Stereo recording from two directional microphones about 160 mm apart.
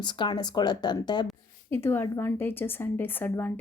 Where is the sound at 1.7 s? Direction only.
15° left (ahead or behind).